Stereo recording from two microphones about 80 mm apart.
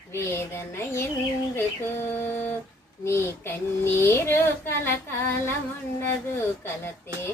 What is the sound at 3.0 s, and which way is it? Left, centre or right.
Child singing, left.